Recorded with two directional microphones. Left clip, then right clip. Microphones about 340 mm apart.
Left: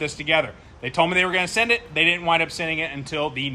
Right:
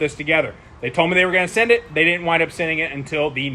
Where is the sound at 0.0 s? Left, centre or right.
Centre.